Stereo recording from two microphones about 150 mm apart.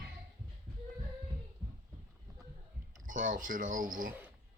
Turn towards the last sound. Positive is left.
turn(degrees=-65)  # may be behind; listen again after turning